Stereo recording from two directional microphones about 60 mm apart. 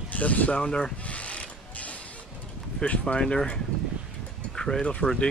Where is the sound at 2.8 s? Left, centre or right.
Left.